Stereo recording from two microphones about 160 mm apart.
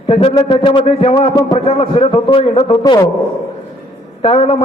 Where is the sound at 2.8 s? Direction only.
25° left (ahead or behind).